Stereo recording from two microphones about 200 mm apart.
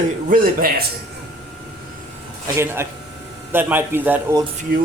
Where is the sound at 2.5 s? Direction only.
15° right (ahead or behind).